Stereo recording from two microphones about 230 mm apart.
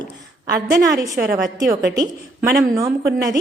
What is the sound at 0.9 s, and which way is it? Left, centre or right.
Speech, centre.